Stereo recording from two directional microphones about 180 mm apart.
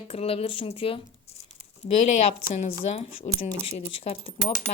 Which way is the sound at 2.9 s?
35° left (ahead or behind).